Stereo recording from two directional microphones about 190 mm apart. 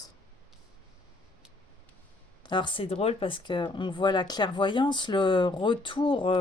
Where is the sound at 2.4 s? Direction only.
25° left (ahead or behind).